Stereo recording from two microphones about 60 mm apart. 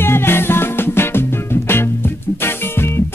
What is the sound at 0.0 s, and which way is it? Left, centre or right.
Music, left.